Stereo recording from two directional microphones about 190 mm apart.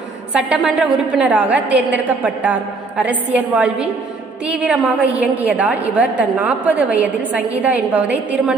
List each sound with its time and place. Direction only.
0.3 s a woman's voice: 5° right (ahead or behind)